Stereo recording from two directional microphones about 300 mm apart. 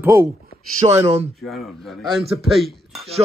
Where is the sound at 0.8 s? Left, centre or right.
Right.